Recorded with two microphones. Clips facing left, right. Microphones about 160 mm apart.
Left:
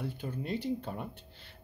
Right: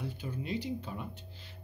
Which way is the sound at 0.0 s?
55° left (ahead or behind).